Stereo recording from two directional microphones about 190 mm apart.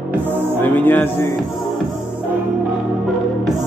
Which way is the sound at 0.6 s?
10° left (ahead or behind).